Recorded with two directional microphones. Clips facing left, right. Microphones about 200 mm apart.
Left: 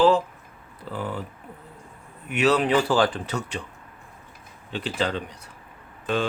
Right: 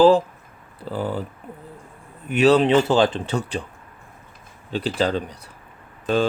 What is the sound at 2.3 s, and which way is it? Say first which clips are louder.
Speech: right 5 dB; 30° right (ahead or behind).